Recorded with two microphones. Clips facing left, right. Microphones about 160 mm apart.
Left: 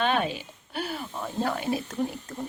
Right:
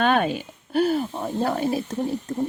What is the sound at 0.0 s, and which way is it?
Speech, 50° right (ahead or behind).